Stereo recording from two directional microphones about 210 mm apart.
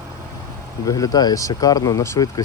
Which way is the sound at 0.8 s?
15° left (ahead or behind).